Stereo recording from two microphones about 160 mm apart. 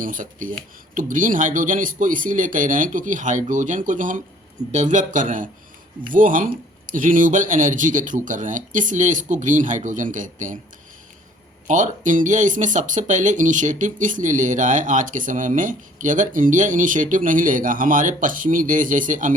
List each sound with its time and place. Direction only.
0.0 s speech: 55° right (ahead or behind)
11.7 s speech: 50° right (ahead or behind)